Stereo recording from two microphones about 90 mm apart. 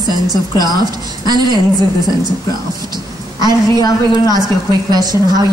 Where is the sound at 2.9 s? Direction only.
50° right (ahead or behind).